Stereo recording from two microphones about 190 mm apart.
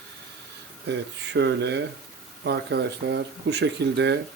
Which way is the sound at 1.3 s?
65° right (ahead or behind).